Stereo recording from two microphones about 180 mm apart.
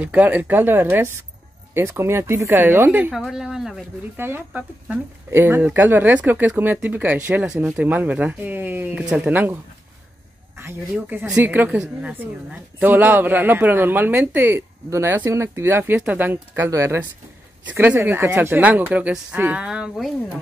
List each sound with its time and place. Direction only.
0.0 s a woman's voice: 10° right (ahead or behind)
10.6 s a woman's voice: 10° right (ahead or behind)